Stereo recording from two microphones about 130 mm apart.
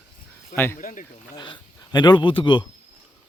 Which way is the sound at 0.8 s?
90° left.